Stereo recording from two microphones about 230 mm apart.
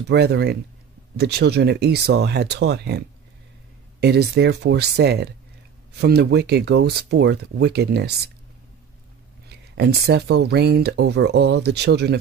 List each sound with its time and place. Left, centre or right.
0.1 s speech: right
9.8 s speech: right